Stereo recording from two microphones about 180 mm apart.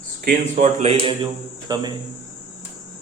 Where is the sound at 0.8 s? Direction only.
30° right (ahead or behind).